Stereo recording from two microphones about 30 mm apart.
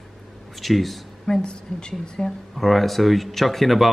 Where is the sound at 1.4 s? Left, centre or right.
Left.